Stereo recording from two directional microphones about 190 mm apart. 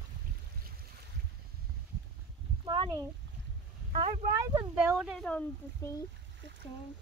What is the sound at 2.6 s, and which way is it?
Speech, 25° right (ahead or behind).